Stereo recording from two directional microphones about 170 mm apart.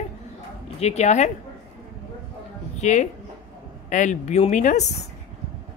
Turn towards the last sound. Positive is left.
turn(degrees=45)  # may be behind; listen again after turning